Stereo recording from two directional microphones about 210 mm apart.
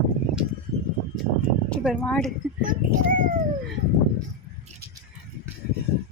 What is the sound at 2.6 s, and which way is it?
Speech, 40° right (ahead or behind).